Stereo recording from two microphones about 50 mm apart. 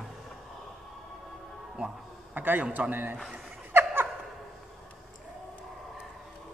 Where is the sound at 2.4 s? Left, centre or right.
Right.